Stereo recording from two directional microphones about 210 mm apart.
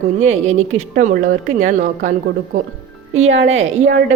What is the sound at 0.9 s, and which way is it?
Speech, 40° right (ahead or behind).